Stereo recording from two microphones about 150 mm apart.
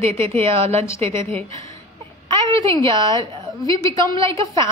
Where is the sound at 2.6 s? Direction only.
20° left (ahead or behind).